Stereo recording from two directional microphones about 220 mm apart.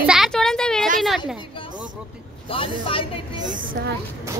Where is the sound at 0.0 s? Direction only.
Centre (ahead or behind).